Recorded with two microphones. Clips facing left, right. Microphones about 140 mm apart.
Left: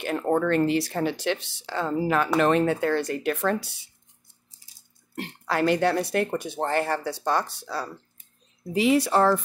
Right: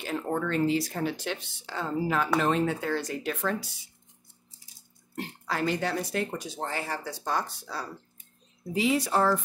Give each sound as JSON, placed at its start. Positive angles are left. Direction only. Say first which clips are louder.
{"t": 0.0, "sound": "speech", "louder": "left 6 dB", "side_deg": 60}
{"t": 5.1, "sound": "speech", "louder": "left 5 dB", "side_deg": 70}